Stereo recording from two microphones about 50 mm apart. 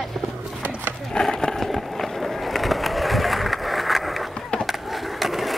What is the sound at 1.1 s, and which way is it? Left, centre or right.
Skateboard, centre.